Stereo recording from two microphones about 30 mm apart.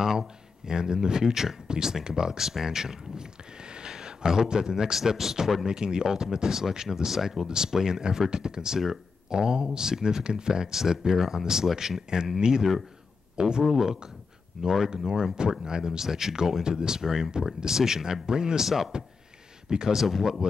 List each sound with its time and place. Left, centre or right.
0.7 s speech: right
1.3 s speech: centre
1.7 s speech: right
3.6 s a sound: right
4.9 s speech: centre
5.7 s speech: right; by 7.4 s centre
7.4 s speech: right
12.1 s speech: right
16.0 s speech: centre
16.6 s speech: right
18.6 s speech: centre
19.9 s speech: centre